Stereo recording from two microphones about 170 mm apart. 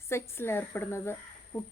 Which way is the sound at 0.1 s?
15° left (ahead or behind).